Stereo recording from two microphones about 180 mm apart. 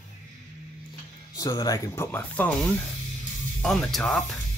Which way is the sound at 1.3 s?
20° left (ahead or behind).